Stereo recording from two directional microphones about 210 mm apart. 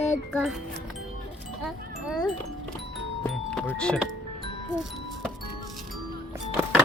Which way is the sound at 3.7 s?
5° left (ahead or behind).